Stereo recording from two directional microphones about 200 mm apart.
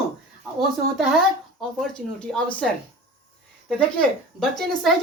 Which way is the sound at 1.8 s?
5° left (ahead or behind).